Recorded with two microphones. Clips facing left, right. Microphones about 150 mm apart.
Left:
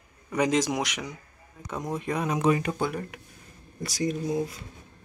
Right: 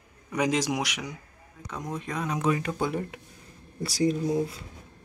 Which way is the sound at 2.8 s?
25° right (ahead or behind).